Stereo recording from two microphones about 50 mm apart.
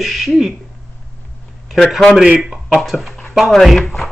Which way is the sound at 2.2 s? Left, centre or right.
Right.